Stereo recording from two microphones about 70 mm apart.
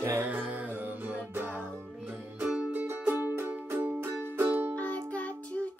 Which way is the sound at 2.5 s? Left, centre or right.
Centre.